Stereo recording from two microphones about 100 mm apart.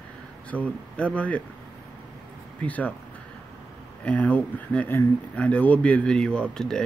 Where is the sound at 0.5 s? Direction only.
15° right (ahead or behind).